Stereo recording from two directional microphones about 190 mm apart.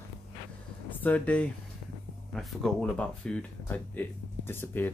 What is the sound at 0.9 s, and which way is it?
Speech, 10° left (ahead or behind).